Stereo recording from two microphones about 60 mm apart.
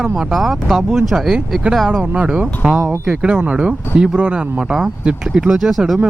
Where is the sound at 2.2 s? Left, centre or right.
Right.